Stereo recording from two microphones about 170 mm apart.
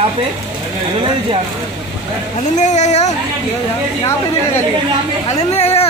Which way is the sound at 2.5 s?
45° left (ahead or behind).